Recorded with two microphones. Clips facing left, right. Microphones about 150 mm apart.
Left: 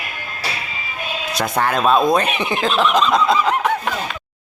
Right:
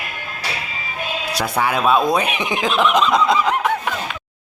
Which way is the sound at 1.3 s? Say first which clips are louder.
Left 1 dB; 10° right (ahead or behind).